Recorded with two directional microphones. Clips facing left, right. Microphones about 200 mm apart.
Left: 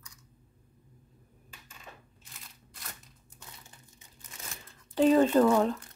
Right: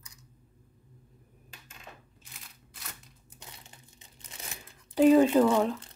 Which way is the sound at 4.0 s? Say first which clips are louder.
Right 1 dB; 20° right (ahead or behind).